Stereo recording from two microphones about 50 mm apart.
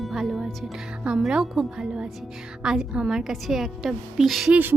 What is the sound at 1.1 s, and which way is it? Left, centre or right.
A woman's voice, centre.